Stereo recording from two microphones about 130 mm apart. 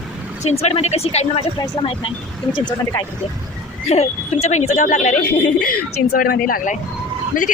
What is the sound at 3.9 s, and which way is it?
A woman's voice, 55° left (ahead or behind).